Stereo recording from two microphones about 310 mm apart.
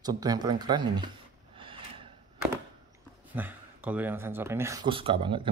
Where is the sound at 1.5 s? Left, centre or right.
Centre.